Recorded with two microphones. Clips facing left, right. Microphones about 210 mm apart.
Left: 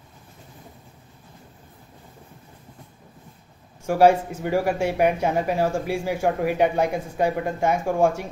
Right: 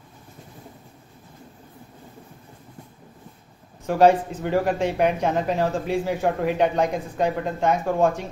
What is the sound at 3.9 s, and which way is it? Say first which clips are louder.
Speech: even; 10° left (ahead or behind).